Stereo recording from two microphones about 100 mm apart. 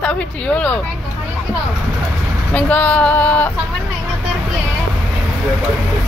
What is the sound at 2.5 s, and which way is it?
Speech, 15° left (ahead or behind).